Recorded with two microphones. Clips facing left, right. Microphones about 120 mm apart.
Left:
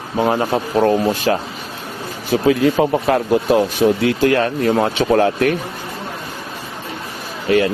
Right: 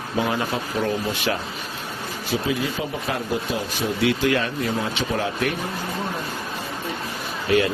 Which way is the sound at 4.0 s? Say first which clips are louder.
Left 6 dB; 40° left (ahead or behind).